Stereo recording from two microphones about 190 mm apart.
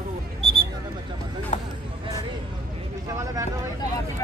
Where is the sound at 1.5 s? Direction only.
40° left (ahead or behind).